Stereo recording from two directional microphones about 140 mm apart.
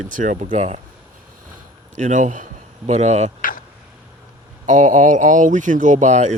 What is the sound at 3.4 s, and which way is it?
Vehicle, 80° left.